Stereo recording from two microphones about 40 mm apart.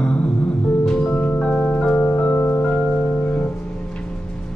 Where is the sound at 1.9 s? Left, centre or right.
Left.